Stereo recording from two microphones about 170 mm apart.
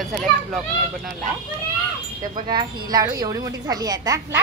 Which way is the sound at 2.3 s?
25° right (ahead or behind).